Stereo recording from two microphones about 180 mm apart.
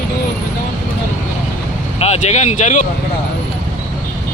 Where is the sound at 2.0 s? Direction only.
35° left (ahead or behind).